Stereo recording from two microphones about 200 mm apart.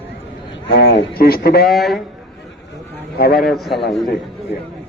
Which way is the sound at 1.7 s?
Centre (ahead or behind).